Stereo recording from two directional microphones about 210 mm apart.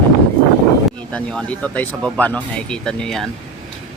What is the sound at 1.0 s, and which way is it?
Speech, 5° left (ahead or behind).